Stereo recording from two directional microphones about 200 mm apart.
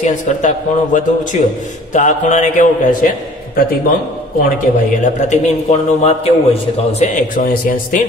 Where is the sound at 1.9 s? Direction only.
40° left (ahead or behind).